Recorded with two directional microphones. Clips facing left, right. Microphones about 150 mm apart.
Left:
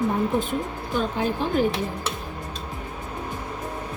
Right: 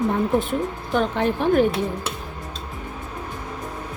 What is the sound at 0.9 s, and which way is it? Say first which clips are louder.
Speech: right 3 dB; 65° right (ahead or behind).